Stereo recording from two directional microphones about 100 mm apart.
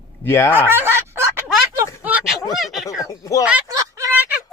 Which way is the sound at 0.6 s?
20° right (ahead or behind).